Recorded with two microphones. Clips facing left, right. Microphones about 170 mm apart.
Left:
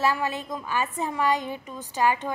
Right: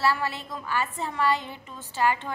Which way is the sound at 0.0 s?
15° left (ahead or behind).